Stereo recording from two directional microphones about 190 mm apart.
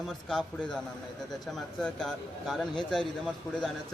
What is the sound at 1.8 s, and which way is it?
Speech, centre (ahead or behind).